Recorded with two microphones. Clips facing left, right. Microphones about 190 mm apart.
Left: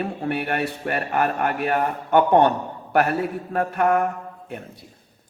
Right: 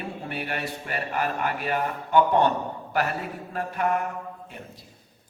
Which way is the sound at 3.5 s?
55° left (ahead or behind).